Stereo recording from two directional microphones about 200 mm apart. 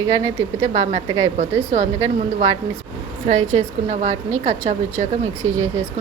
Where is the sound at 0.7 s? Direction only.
35° right (ahead or behind).